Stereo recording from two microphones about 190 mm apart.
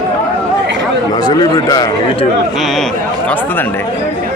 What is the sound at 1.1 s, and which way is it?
Speech, 20° left (ahead or behind).